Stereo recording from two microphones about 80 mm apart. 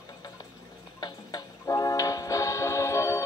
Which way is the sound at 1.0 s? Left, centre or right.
Left.